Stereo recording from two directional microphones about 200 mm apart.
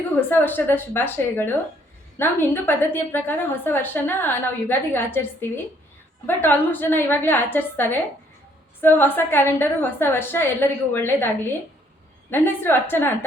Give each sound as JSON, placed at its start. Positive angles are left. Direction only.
{"t": 0.3, "sound": "a woman's voice", "side_deg": 10}
{"t": 12.3, "sound": "a woman's voice", "side_deg": 10}